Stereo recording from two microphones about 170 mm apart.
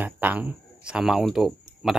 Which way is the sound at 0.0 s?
10° right (ahead or behind).